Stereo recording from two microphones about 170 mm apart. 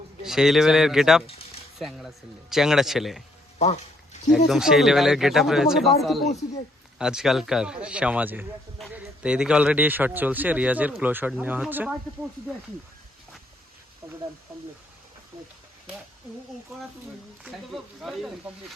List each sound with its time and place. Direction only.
0.2 s speech: centre (ahead or behind)
3.6 s a sound: 40° left (ahead or behind)
4.4 s speech: centre (ahead or behind)
17.4 s speech: centre (ahead or behind)